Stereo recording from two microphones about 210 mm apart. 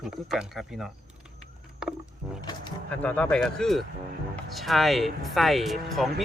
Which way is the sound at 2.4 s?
20° left (ahead or behind).